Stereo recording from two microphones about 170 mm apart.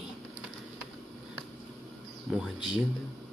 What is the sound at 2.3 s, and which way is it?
Speech, 5° right (ahead or behind).